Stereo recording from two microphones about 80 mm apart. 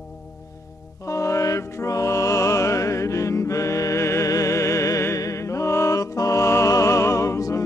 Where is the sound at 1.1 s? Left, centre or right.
Left.